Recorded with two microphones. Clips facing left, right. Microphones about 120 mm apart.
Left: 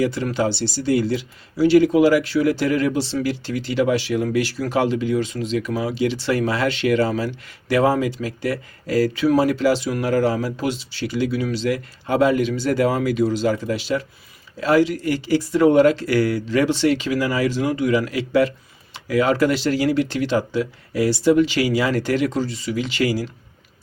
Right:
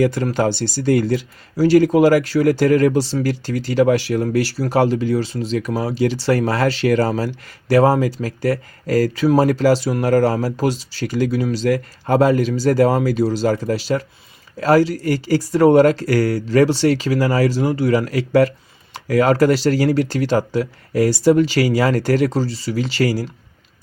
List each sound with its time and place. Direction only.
0.0 s speech: 45° right (ahead or behind)